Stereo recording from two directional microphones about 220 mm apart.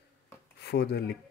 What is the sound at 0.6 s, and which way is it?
Speech, 50° left (ahead or behind).